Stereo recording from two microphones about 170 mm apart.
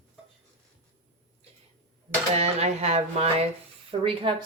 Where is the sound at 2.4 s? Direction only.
40° right (ahead or behind).